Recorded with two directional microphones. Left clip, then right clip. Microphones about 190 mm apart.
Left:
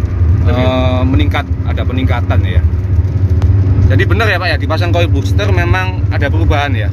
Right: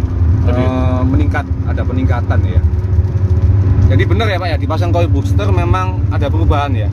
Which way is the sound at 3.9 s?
Centre (ahead or behind).